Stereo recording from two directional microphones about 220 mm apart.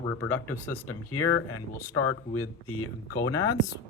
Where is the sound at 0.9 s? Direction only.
90° left.